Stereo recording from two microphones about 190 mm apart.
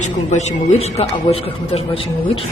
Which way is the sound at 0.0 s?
35° left (ahead or behind).